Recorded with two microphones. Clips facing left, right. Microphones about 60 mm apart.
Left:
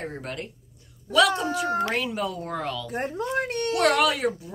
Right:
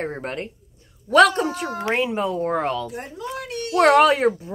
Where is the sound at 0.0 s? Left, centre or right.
Right.